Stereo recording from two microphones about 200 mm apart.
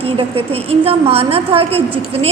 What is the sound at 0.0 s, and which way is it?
A woman's voice, 30° right (ahead or behind).